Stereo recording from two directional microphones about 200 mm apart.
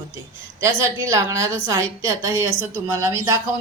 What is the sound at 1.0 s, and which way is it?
A woman's voice, 15° right (ahead or behind).